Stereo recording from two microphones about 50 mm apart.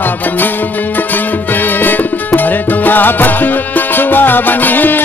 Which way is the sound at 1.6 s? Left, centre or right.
Left.